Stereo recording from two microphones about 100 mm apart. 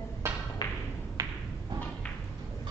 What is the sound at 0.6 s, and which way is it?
Music, 40° left (ahead or behind).